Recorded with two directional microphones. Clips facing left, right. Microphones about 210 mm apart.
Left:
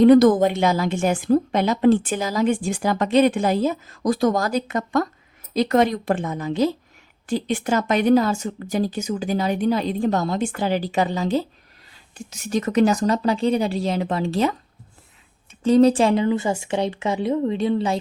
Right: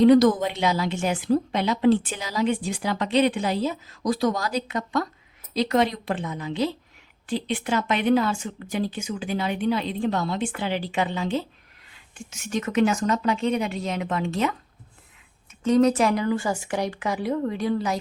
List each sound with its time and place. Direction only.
0.0 s a woman's voice: 50° left (ahead or behind); by 14.5 s 35° left (ahead or behind)
15.6 s speech: 30° left (ahead or behind)